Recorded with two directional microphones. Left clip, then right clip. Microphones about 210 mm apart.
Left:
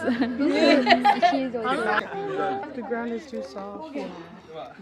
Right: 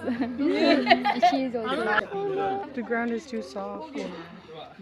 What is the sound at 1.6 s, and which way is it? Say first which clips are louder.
Speech: left 2 dB; 60° left (ahead or behind).